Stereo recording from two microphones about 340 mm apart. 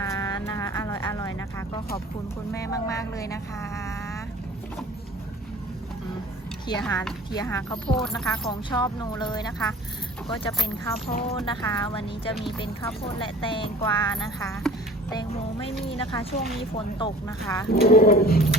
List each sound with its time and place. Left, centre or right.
0.0 s music: centre
2.5 s speech: centre
6.7 s speech: centre
8.4 s speech: centre
11.1 s speech: centre
17.7 s roaring cats: left